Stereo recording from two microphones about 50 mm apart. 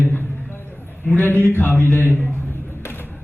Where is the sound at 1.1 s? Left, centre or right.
Left.